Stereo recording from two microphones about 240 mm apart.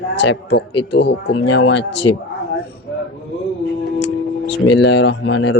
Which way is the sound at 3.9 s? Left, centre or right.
Left.